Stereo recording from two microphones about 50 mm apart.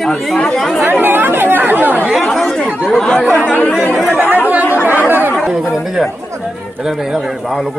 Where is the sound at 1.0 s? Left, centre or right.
Right.